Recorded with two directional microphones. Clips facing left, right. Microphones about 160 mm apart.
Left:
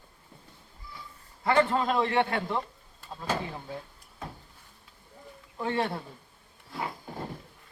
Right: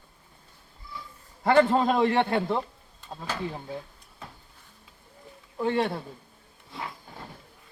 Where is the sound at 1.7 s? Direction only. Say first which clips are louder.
Right 4 dB; 30° right (ahead or behind).